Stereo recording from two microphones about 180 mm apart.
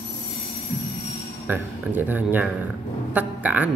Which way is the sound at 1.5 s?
10° right (ahead or behind).